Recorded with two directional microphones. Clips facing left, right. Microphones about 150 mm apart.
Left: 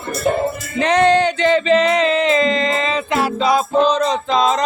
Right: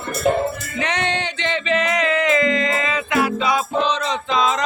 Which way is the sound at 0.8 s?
35° left (ahead or behind).